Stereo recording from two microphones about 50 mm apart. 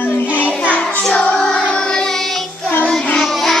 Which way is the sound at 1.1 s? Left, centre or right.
Left.